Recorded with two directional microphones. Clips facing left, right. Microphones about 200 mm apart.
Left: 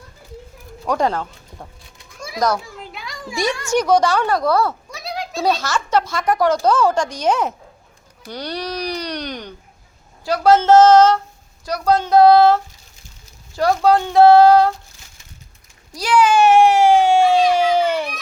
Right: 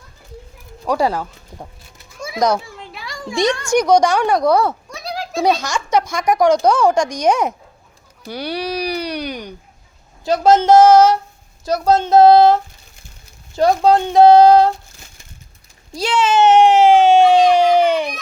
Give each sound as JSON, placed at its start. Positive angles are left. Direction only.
{"t": 0.9, "sound": "speech", "side_deg": -10}
{"t": 2.0, "sound": "children playing", "side_deg": 0}
{"t": 2.9, "sound": "a sound", "side_deg": 0}
{"t": 3.7, "sound": "speech", "side_deg": -15}
{"t": 4.9, "sound": "a sound", "side_deg": 0}
{"t": 5.4, "sound": "speech", "side_deg": -15}
{"t": 10.2, "sound": "speech", "side_deg": -20}
{"t": 11.6, "sound": "speech", "side_deg": -25}
{"t": 13.6, "sound": "speech", "side_deg": -20}
{"t": 15.9, "sound": "speech", "side_deg": -25}